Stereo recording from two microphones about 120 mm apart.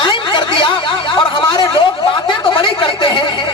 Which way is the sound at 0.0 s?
40° left (ahead or behind).